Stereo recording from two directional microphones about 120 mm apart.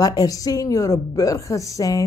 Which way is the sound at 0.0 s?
30° left (ahead or behind).